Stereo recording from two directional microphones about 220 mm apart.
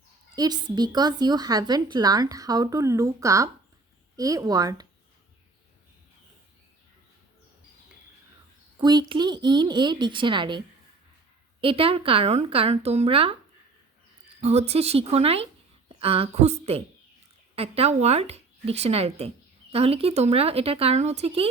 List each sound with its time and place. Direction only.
0.3 s a woman's voice: 20° right (ahead or behind)
8.8 s speech: 20° right (ahead or behind)
11.6 s speech: 25° right (ahead or behind)
14.4 s a woman's voice: 30° right (ahead or behind)